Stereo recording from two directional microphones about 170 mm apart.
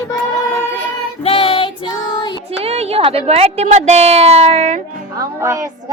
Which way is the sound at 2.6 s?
35° right (ahead or behind).